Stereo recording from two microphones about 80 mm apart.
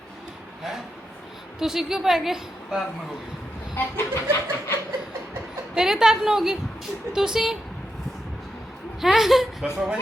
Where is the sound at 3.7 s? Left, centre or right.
Left.